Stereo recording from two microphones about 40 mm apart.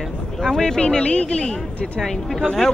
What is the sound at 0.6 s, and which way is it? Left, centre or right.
Speech, left.